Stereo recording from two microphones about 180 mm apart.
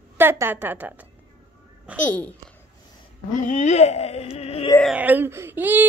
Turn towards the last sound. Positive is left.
turn(degrees=-10)  # may be behind; listen again after turning